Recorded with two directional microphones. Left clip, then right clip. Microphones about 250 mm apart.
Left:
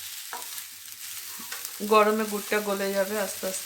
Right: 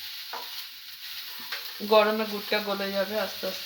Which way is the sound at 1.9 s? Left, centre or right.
Centre.